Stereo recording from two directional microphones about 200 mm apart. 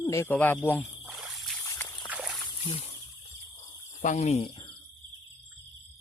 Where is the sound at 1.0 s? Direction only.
Centre (ahead or behind).